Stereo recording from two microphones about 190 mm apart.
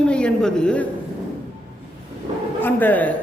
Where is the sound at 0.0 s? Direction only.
5° left (ahead or behind).